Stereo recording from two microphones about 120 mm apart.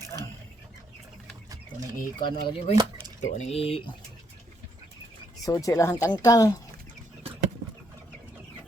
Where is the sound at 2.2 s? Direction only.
40° left (ahead or behind).